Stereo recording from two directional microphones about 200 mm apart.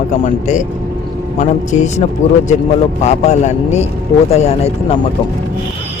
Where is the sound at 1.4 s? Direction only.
35° left (ahead or behind).